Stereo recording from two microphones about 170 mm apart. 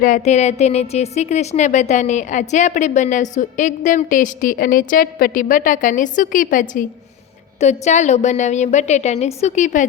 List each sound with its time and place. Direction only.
0.0 s a woman's voice: 45° left (ahead or behind)